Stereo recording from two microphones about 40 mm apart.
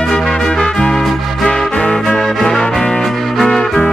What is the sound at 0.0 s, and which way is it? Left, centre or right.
Music, centre.